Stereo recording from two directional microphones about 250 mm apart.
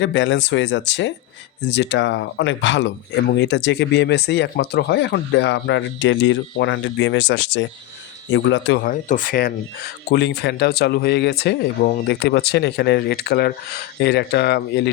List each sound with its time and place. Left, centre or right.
0.0 s speech: left